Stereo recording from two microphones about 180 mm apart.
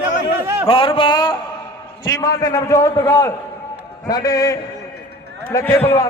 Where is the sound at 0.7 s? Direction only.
30° left (ahead or behind).